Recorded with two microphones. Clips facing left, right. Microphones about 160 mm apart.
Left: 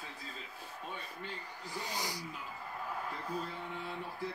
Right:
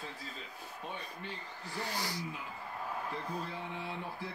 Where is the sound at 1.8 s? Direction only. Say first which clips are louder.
Right 2 dB; 15° left (ahead or behind).